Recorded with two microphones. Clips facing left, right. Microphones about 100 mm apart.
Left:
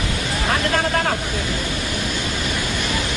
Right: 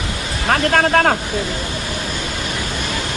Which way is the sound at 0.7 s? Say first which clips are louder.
Right 9 dB; 55° right (ahead or behind).